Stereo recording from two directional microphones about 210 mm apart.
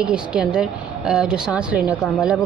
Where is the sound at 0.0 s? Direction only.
5° right (ahead or behind).